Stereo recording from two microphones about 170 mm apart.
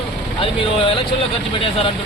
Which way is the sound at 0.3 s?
30° left (ahead or behind).